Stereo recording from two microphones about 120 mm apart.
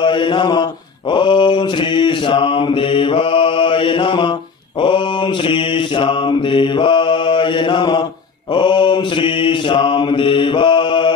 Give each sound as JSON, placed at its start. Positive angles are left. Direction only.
{"t": 0.0, "sound": "mantra", "side_deg": 45}
{"t": 5.5, "sound": "mantra", "side_deg": 45}